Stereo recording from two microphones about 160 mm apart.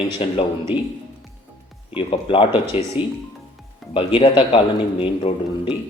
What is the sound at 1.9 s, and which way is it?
Speech, 35° left (ahead or behind).